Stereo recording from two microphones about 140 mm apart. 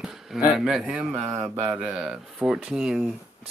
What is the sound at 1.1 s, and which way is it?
Mantra, 20° right (ahead or behind).